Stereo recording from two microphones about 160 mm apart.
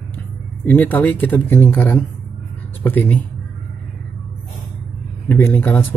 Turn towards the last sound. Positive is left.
turn(degrees=10)  # may be behind; listen again after turning